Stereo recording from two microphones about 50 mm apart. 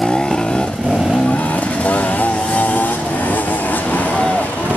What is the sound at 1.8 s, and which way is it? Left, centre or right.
Vehicle, left.